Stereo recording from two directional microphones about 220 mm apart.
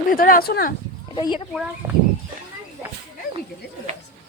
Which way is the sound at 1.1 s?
20° left (ahead or behind).